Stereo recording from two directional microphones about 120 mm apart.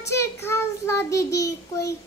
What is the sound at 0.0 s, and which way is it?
A child's voice, 20° left (ahead or behind).